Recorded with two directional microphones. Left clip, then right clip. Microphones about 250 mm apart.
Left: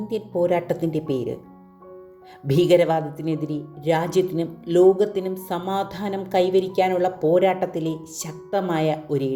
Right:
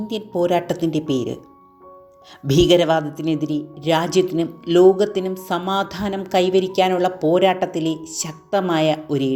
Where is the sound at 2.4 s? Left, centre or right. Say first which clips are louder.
Right 2 dB; centre.